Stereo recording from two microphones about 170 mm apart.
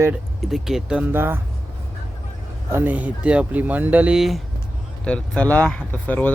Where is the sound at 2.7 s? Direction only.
10° right (ahead or behind).